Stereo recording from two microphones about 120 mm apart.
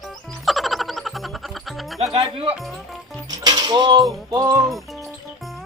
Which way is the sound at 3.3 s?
35° right (ahead or behind).